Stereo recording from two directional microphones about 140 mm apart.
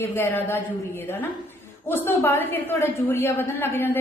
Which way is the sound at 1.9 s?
15° left (ahead or behind).